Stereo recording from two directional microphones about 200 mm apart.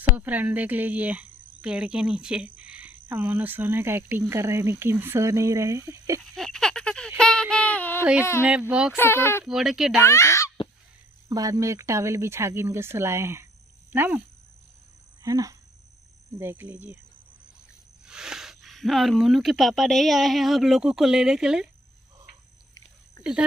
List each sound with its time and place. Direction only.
0.1 s speech: 10° right (ahead or behind)
6.3 s a sound: centre (ahead or behind)
8.0 s speech: 5° right (ahead or behind)
8.9 s speech: 10° left (ahead or behind)
9.4 s speech: 5° right (ahead or behind)
10.0 s a child's voice: 15° left (ahead or behind)
11.2 s speech: 20° right (ahead or behind)
15.2 s speech: 15° right (ahead or behind)
18.0 s speech: 5° right (ahead or behind)